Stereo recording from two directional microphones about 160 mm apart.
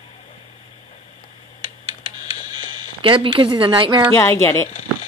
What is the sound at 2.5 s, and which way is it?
Speech, 30° right (ahead or behind).